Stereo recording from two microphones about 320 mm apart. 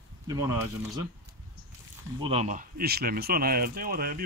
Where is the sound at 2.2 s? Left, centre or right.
Centre.